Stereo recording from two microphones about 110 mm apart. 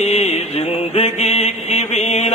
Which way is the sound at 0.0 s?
75° left (ahead or behind).